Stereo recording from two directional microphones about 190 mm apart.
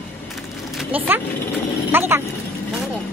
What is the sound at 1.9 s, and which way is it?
Speech, 10° right (ahead or behind).